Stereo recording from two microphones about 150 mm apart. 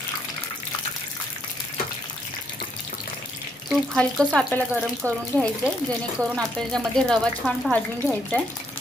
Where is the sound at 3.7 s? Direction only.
5° left (ahead or behind).